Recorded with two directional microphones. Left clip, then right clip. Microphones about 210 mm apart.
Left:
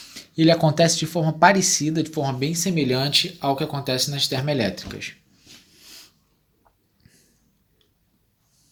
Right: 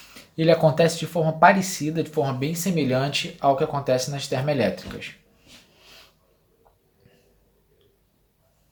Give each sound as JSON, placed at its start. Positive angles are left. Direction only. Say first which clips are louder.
{"t": 0.0, "sound": "speech", "louder": "left 3 dB", "side_deg": 40}
{"t": 5.8, "sound": "snort", "louder": "left 5 dB", "side_deg": 40}